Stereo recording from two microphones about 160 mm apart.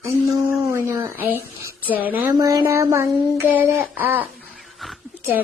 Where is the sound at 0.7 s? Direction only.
15° right (ahead or behind).